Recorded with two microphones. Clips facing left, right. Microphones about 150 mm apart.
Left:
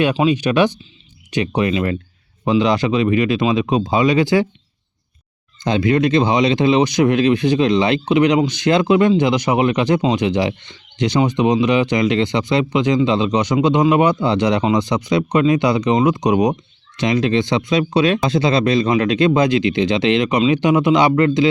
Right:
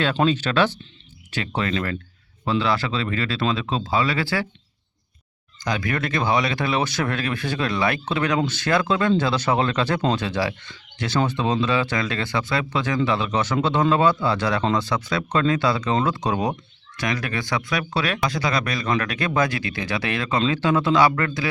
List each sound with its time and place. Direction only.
0.2 s speech: 15° left (ahead or behind)
5.6 s speech: 25° left (ahead or behind)